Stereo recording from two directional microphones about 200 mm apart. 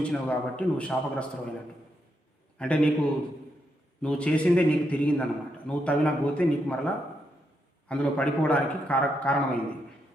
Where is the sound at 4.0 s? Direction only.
5° left (ahead or behind).